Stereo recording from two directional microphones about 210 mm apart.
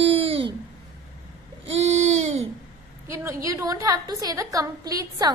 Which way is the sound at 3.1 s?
15° right (ahead or behind).